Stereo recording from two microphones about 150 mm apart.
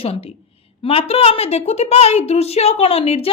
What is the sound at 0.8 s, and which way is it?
A woman's voice, 40° left (ahead or behind).